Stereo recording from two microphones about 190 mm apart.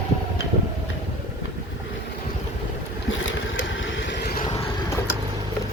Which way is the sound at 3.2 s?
80° left.